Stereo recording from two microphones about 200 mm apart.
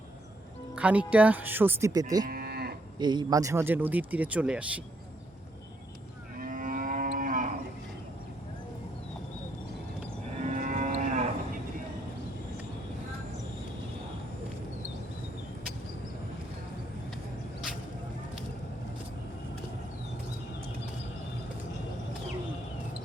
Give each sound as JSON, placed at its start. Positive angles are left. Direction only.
{"t": 0.8, "sound": "speech", "side_deg": -5}
{"t": 2.2, "sound": "moo", "side_deg": -50}
{"t": 3.0, "sound": "speech", "side_deg": -20}
{"t": 6.3, "sound": "livestock", "side_deg": -45}
{"t": 10.4, "sound": "livestock", "side_deg": -35}